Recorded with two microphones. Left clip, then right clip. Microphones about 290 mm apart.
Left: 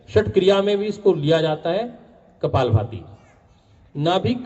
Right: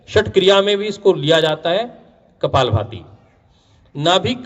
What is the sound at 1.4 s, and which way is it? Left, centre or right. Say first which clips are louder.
Speech: right 4 dB; right.